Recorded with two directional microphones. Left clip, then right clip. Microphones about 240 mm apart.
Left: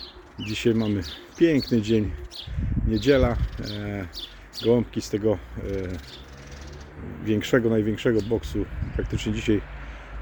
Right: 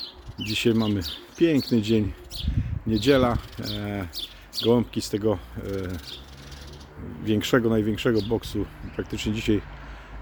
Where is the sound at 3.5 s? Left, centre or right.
Right.